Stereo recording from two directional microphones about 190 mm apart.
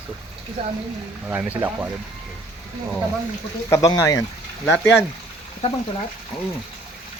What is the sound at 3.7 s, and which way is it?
Speech, 15° left (ahead or behind).